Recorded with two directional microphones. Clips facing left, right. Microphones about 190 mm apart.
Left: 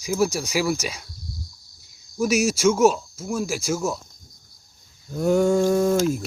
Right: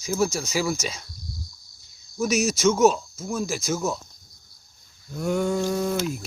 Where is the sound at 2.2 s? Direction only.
10° left (ahead or behind).